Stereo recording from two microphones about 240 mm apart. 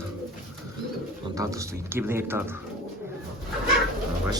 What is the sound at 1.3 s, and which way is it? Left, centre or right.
Speech, centre.